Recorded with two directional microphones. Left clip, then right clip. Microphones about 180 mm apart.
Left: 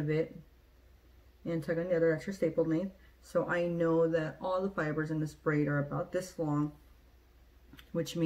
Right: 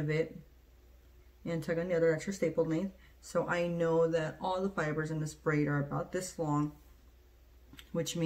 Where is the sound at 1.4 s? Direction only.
20° right (ahead or behind).